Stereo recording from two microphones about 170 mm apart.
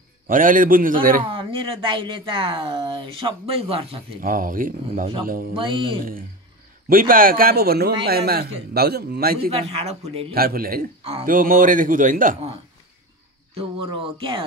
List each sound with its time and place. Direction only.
0.3 s speech: 50° right (ahead or behind)
1.3 s speech: 30° right (ahead or behind)
4.2 s speech: 55° right (ahead or behind)
5.5 s speech: 30° right (ahead or behind)
6.9 s a man's voice: 55° right (ahead or behind)
9.5 s speech: 35° right (ahead or behind)
10.3 s speech: 60° right (ahead or behind)
13.6 s speech: 30° right (ahead or behind)